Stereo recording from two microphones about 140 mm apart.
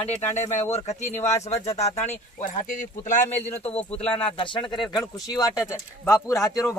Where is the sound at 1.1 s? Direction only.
20° left (ahead or behind).